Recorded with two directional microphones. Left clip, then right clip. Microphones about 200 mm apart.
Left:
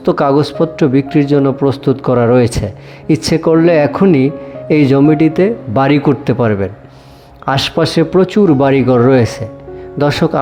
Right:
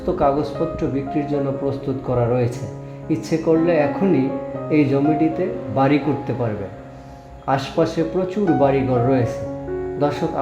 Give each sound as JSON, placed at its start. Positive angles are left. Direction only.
{"t": 0.0, "sound": "speech", "side_deg": 45}